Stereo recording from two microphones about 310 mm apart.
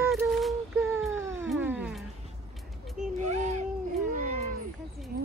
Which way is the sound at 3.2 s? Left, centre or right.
Right.